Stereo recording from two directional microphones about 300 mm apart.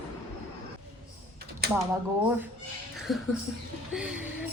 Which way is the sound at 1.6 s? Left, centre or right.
Right.